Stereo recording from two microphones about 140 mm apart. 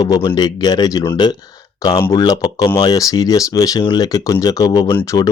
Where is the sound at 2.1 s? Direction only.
30° left (ahead or behind).